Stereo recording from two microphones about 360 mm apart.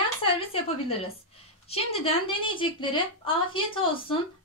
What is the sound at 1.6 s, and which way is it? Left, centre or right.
Speech, centre.